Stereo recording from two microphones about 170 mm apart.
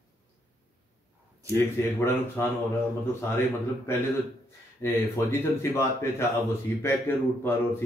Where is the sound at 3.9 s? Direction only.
15° left (ahead or behind).